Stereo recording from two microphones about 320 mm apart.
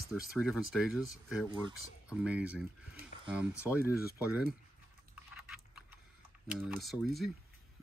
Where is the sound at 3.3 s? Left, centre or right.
Centre.